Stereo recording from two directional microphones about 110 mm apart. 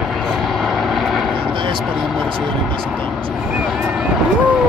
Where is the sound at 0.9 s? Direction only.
Centre (ahead or behind).